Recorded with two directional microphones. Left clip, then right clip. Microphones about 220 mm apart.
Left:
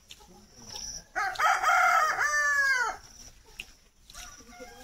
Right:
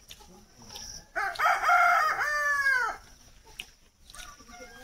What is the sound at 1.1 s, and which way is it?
Chicken, 35° left (ahead or behind).